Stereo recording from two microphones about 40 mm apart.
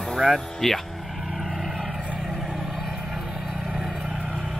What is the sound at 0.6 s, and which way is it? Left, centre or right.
Speech, centre.